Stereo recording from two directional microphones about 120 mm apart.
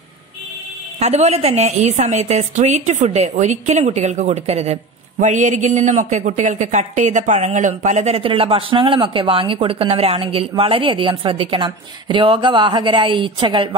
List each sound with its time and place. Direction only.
0.9 s a woman's voice: 65° right (ahead or behind)
5.2 s a man's voice: 90° right; by 8.2 s 70° right (ahead or behind)
8.2 s speech: 50° right (ahead or behind)